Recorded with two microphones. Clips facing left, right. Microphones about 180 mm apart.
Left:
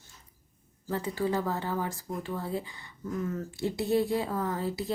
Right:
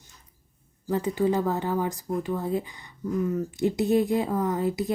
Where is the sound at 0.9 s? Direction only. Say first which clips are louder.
Right 6 dB; 20° right (ahead or behind).